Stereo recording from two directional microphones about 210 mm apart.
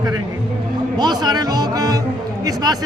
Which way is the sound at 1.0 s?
20° right (ahead or behind).